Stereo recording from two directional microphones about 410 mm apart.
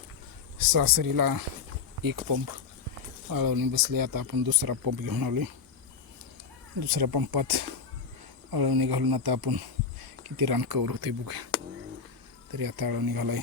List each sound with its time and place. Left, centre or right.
0.6 s speech: right
6.7 s speech: right
12.5 s speech: right